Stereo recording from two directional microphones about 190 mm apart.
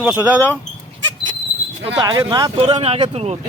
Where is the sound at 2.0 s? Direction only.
20° right (ahead or behind).